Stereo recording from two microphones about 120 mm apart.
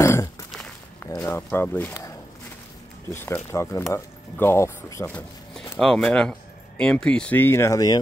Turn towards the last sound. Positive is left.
turn(degrees=30)  # may be behind; listen again after turning